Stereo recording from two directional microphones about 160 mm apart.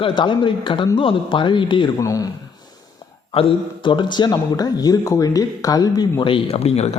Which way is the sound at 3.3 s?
30° left (ahead or behind).